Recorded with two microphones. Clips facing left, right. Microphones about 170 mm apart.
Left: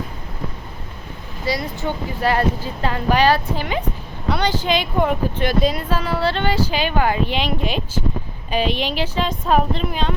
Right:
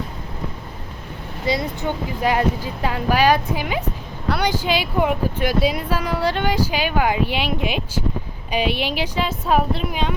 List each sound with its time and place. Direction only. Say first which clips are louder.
1.5 s speech: right 1 dB; 20° right (ahead or behind)